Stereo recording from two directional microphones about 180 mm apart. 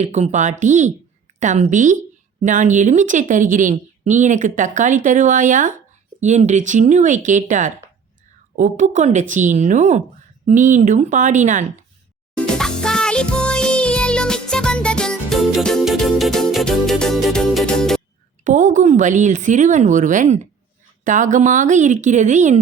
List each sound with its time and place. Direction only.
0.0 s a woman's voice: 40° right (ahead or behind)
12.5 s music: 5° left (ahead or behind)
18.4 s a woman's voice: 45° right (ahead or behind)